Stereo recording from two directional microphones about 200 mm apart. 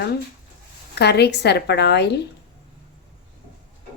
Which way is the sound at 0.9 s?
55° left (ahead or behind).